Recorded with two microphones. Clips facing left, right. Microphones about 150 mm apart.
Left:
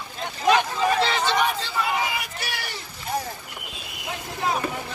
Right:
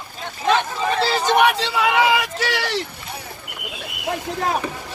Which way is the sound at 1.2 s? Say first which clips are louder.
Right 6 dB; 65° right (ahead or behind).